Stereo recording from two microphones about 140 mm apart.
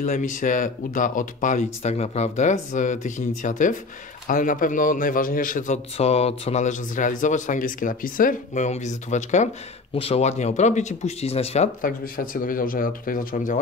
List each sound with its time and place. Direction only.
0.0 s a man's voice: 70° left (ahead or behind)
5.9 s speech: 45° left (ahead or behind)
9.9 s speech: 45° left (ahead or behind)
11.8 s speech: 85° left